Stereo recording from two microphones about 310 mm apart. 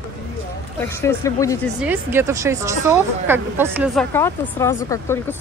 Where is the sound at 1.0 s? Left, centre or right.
Centre.